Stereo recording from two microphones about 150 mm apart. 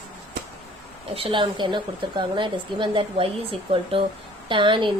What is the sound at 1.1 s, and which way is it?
A woman's voice, 35° right (ahead or behind).